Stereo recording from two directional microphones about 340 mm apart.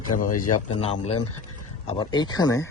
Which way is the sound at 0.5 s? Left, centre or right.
Centre.